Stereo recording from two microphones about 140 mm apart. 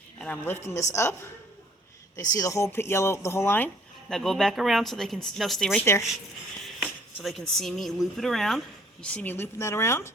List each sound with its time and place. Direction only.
0.2 s a woman's voice: 10° left (ahead or behind)
2.3 s speech: 25° left (ahead or behind)
4.1 s speech: 5° left (ahead or behind)
5.8 s speech: 20° left (ahead or behind)
6.8 s speech: centre (ahead or behind); by 10.1 s 20° left (ahead or behind)